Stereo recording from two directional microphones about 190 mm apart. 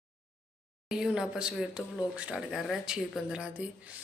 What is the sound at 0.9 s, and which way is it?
Speech, 5° right (ahead or behind).